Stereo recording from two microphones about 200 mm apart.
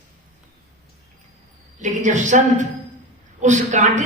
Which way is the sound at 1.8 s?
40° right (ahead or behind).